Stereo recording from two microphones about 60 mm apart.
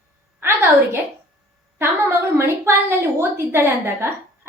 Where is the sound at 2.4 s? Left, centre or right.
Right.